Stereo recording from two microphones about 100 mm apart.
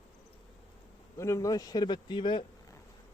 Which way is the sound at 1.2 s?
30° left (ahead or behind).